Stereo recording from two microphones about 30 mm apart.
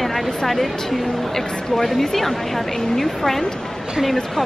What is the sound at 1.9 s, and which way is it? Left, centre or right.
A woman's voice, centre.